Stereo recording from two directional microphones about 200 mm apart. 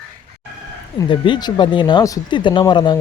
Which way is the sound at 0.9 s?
25° left (ahead or behind).